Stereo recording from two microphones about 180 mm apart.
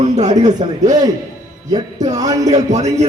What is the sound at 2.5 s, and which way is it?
Speech, 40° right (ahead or behind).